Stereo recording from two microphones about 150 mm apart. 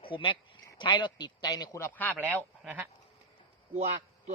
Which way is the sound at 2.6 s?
10° right (ahead or behind).